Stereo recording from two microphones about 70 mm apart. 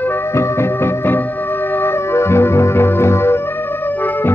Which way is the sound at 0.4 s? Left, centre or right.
Left.